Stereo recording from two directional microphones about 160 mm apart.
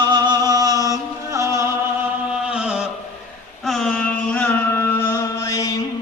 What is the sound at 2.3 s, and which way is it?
Chant, 5° right (ahead or behind).